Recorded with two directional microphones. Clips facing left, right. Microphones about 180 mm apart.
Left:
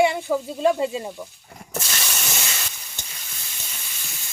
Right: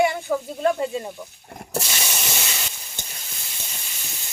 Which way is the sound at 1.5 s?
45° right (ahead or behind).